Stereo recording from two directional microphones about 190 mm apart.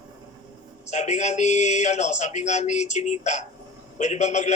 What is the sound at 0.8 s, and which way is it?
A man's voice, 35° left (ahead or behind).